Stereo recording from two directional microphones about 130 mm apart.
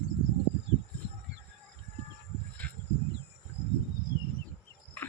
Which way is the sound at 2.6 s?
10° left (ahead or behind).